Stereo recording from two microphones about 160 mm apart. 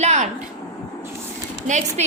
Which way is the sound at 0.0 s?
45° right (ahead or behind).